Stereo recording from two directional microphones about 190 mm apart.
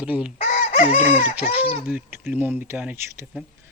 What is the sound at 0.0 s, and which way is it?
Speech, 5° right (ahead or behind).